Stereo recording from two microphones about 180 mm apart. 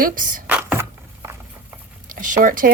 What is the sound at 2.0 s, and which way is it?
Speech, 50° right (ahead or behind).